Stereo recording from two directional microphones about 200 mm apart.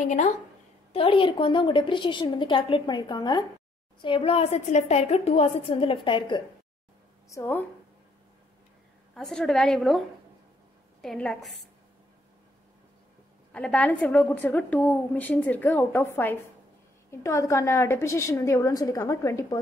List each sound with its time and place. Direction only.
0.0 s a woman's voice: 40° left (ahead or behind)
0.9 s a woman's voice: 25° left (ahead or behind)
7.2 s a woman's voice: 15° left (ahead or behind)
9.1 s a woman's voice: 5° left (ahead or behind)
13.5 s a woman's voice: 5° left (ahead or behind)